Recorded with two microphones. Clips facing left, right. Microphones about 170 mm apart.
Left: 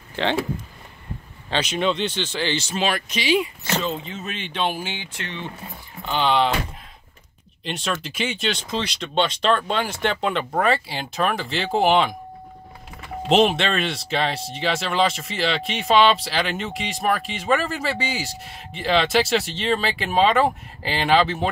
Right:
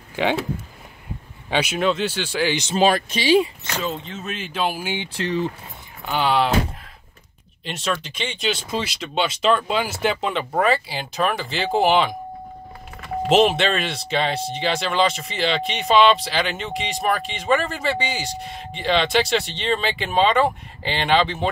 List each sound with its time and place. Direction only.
0.1 s speech: 10° right (ahead or behind)
1.5 s speech: 10° right (ahead or behind)
2.7 s speech: 35° right (ahead or behind)
3.8 s speech: centre (ahead or behind)
5.0 s speech: 35° right (ahead or behind)
6.0 s speech: 10° right (ahead or behind)
7.6 s speech: centre (ahead or behind)
8.5 s speech: 5° right (ahead or behind)
13.3 s speech: centre (ahead or behind)